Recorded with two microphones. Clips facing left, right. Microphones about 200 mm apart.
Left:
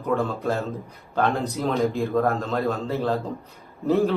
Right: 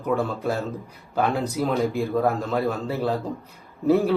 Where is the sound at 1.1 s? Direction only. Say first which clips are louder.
Even; 5° right (ahead or behind).